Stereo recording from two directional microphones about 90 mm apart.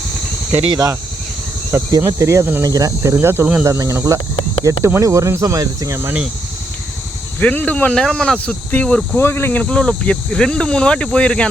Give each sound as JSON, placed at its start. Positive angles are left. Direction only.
{"t": 0.7, "sound": "speech", "side_deg": -40}
{"t": 1.7, "sound": "speech", "side_deg": -30}
{"t": 2.6, "sound": "speech", "side_deg": -45}
{"t": 7.3, "sound": "speech", "side_deg": 15}
{"t": 9.1, "sound": "speech", "side_deg": 25}